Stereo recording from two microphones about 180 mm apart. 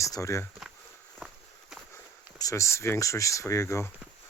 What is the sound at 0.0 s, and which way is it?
Speech, 15° left (ahead or behind).